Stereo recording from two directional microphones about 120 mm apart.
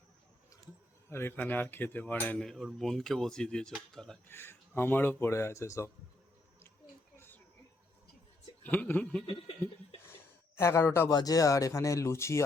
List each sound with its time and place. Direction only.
1.1 s speech: 15° left (ahead or behind)
2.4 s speech: centre (ahead or behind)
4.3 s speech: 20° left (ahead or behind)
7.2 s a sound: 15° left (ahead or behind)
8.6 s speech: 15° left (ahead or behind)
10.6 s speech: 20° left (ahead or behind)
11.1 s speech: 30° left (ahead or behind)